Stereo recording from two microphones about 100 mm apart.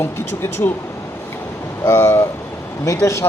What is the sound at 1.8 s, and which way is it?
Speech, 25° left (ahead or behind).